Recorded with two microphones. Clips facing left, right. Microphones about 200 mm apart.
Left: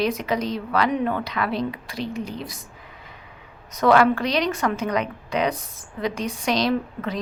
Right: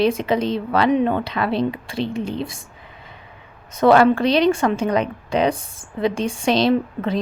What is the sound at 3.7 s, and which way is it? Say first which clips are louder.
Speech: right 4 dB; 30° right (ahead or behind).